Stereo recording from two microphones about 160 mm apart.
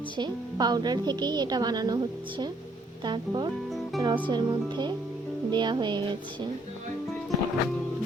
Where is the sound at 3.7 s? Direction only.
Centre (ahead or behind).